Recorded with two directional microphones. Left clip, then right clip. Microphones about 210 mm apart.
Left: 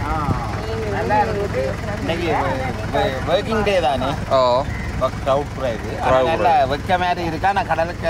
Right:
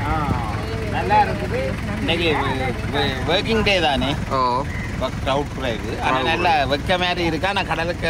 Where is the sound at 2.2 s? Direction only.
45° left (ahead or behind).